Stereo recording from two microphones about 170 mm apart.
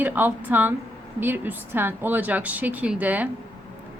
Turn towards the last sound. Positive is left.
turn(degrees=-10)  # may be behind; listen again after turning